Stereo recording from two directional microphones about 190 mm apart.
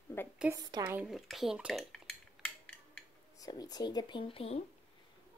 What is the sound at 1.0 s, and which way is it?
Speech, centre (ahead or behind).